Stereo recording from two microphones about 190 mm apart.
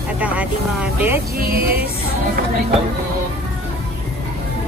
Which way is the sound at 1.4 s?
55° right (ahead or behind).